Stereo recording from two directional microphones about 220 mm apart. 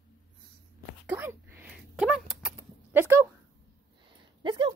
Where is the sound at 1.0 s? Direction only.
10° right (ahead or behind).